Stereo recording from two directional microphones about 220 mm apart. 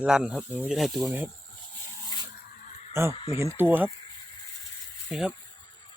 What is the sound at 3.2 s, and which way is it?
Speech, 25° left (ahead or behind).